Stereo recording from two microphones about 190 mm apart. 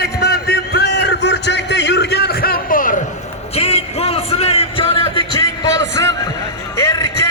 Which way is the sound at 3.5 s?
30° left (ahead or behind).